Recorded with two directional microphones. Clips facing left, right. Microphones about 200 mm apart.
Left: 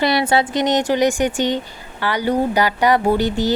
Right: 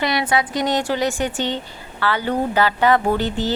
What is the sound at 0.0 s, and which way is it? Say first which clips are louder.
Speech: left 4 dB; 30° left (ahead or behind).